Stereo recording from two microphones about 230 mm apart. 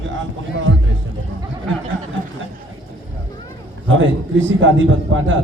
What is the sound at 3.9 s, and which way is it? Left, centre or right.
A man's voice, right.